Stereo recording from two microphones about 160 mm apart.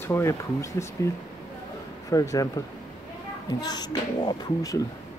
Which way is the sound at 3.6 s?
25° left (ahead or behind).